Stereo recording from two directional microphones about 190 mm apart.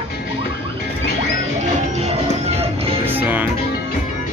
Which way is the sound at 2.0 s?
35° right (ahead or behind).